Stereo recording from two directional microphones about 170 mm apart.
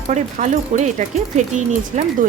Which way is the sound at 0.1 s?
45° right (ahead or behind).